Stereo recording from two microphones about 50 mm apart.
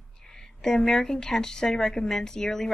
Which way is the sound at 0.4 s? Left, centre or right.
Centre.